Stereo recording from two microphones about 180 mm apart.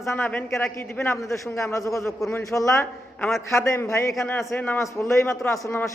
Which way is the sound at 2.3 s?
20° left (ahead or behind).